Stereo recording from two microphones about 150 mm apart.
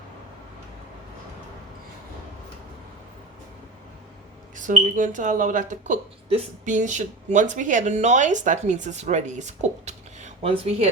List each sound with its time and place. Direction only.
4.5 s speech: 60° right (ahead or behind)